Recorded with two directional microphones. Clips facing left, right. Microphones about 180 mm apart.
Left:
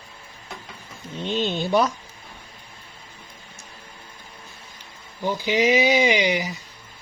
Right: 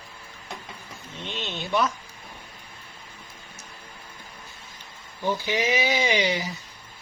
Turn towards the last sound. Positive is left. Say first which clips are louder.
# left 4 dB
turn(degrees=15)  # may be behind; listen again after turning